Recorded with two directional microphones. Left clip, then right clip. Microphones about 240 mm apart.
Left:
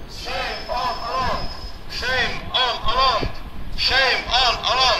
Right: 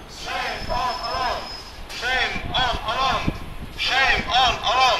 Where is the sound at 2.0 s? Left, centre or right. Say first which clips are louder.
Even; centre.